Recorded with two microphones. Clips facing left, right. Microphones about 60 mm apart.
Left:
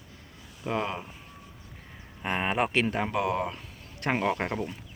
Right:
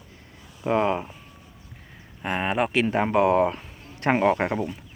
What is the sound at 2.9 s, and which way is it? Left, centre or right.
Speech, right.